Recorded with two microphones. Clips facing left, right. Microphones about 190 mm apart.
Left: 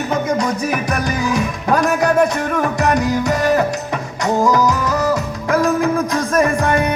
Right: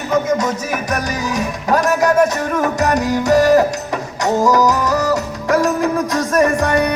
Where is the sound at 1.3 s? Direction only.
40° right (ahead or behind).